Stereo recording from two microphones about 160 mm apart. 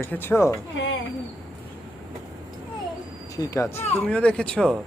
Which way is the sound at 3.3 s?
20° left (ahead or behind).